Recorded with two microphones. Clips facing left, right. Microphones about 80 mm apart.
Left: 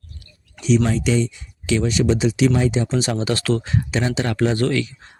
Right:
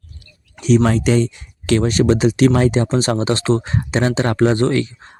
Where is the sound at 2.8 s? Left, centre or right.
Right.